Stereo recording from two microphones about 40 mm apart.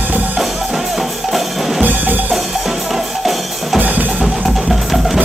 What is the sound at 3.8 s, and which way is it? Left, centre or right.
Music, right.